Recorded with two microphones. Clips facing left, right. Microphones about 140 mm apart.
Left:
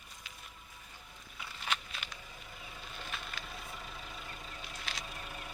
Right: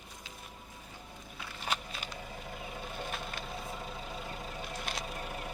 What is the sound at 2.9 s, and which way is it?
Wood, 50° right (ahead or behind).